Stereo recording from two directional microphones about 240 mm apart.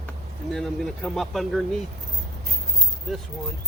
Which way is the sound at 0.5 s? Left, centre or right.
Centre.